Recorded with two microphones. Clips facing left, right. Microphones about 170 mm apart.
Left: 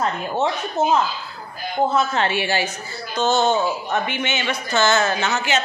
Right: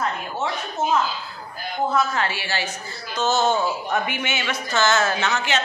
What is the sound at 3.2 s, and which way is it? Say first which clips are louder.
A man's voice: left 2 dB; 5° right (ahead or behind).